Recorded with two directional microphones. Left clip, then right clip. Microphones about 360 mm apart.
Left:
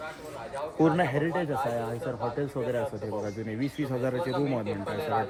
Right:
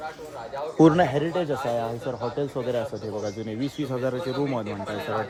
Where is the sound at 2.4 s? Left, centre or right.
Centre.